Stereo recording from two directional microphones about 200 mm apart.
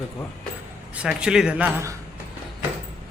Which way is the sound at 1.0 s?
5° right (ahead or behind).